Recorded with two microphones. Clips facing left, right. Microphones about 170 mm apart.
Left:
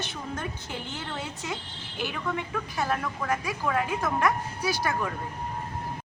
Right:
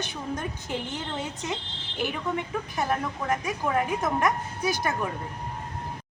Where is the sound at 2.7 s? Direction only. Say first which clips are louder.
Right 1 dB; 20° right (ahead or behind).